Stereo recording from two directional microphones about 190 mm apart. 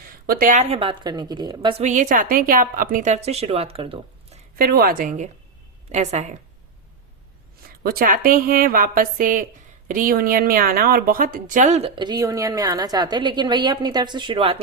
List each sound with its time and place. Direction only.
0.3 s a woman's voice: 50° right (ahead or behind); by 1.7 s 20° right (ahead or behind)
1.8 s a woman's voice: 40° right (ahead or behind)
4.5 s a woman's voice: 50° right (ahead or behind); by 6.3 s 35° right (ahead or behind)
7.7 s a woman's voice: 50° right (ahead or behind)
11.9 s a woman's voice: 20° right (ahead or behind)